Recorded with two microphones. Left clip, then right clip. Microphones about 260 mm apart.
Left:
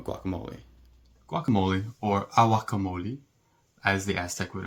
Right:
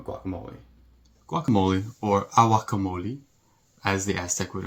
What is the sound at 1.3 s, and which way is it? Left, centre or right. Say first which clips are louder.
Speech: right 3 dB; centre.